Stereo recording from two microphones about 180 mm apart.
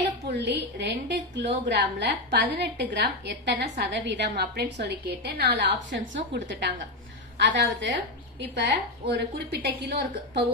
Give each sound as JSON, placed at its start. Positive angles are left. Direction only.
{"t": 0.4, "sound": "a woman's voice", "side_deg": -70}